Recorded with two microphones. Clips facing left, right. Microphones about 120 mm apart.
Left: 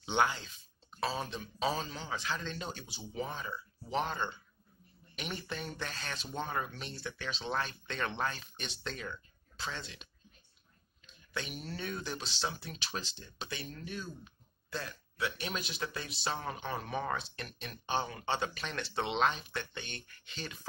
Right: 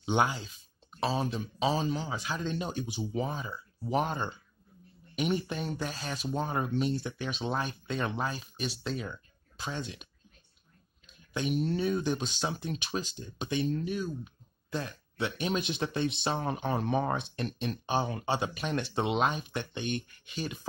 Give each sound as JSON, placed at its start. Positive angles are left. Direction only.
{"t": 0.0, "sound": "speech", "side_deg": -15}
{"t": 0.9, "sound": "speech", "side_deg": -25}
{"t": 6.4, "sound": "speech", "side_deg": -25}
{"t": 11.3, "sound": "speech", "side_deg": -20}
{"t": 18.2, "sound": "speech", "side_deg": -15}